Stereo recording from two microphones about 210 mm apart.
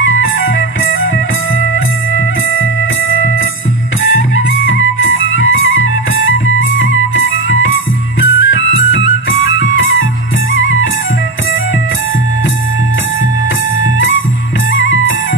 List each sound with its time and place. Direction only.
0.2 s music: 65° left (ahead or behind)
5.3 s music: 70° left (ahead or behind)
7.2 s music: 70° left (ahead or behind)
13.9 s music: 70° left (ahead or behind)